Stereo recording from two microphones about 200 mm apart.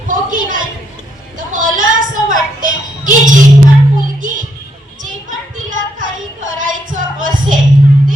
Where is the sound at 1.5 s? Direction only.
40° right (ahead or behind).